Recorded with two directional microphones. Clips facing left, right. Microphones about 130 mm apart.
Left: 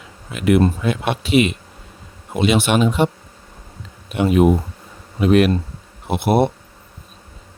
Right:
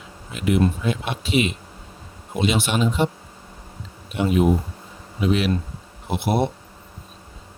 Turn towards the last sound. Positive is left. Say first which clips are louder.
# left 5 dB
turn(degrees=60)  # may be behind; listen again after turning